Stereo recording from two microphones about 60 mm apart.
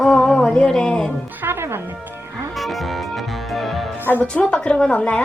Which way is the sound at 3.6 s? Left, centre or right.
Centre.